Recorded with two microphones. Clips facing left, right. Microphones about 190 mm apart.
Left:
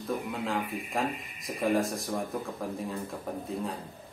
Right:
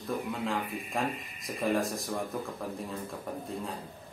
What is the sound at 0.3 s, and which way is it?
Speech, centre (ahead or behind).